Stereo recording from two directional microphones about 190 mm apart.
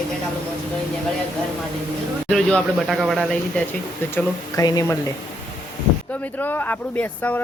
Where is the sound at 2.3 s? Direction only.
5° left (ahead or behind).